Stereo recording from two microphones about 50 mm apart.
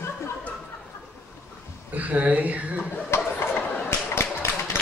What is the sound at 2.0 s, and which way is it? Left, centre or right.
Speech, right.